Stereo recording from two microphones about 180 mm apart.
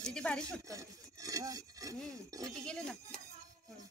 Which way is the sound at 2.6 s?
5° left (ahead or behind).